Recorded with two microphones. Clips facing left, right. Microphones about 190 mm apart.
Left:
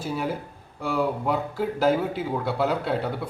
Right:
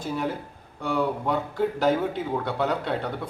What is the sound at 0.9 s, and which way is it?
A man's voice, 5° left (ahead or behind).